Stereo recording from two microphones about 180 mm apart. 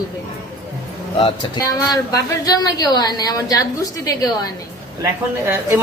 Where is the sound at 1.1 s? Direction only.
25° left (ahead or behind).